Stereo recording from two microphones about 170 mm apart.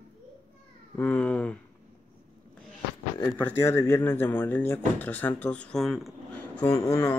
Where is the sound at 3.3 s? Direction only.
15° left (ahead or behind).